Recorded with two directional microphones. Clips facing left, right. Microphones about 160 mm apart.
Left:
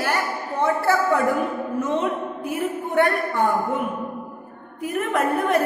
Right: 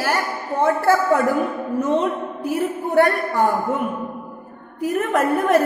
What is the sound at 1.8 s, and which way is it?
A man's voice, 35° right (ahead or behind).